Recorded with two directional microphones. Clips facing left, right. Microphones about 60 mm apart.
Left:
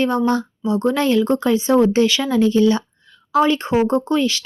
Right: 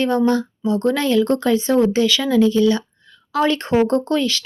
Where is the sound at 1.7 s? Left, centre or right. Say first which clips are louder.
Left 3 dB; left.